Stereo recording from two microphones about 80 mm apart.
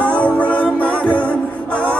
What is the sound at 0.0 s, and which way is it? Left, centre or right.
Music, centre.